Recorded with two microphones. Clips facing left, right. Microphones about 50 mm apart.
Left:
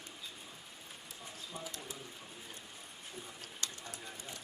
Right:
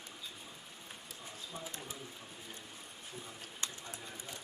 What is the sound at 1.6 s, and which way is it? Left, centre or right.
Speech, right.